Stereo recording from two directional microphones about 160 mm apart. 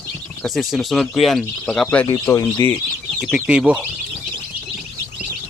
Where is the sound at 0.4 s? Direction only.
Centre (ahead or behind).